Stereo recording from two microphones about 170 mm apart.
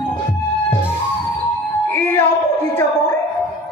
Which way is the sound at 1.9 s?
10° left (ahead or behind).